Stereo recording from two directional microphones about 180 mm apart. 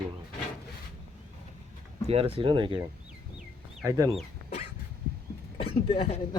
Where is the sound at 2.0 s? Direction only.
30° right (ahead or behind).